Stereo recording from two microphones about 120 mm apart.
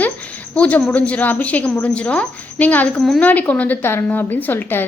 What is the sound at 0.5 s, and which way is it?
A woman's voice, 10° left (ahead or behind).